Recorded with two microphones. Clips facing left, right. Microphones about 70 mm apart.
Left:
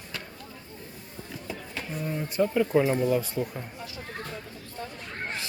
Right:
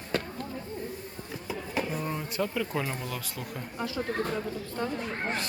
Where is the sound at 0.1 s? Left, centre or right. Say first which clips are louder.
Right 9 dB; right.